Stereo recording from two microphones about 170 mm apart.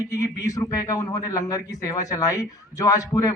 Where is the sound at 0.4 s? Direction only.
20° left (ahead or behind).